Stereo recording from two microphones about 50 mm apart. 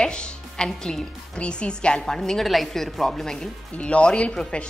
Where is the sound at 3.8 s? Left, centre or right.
Left.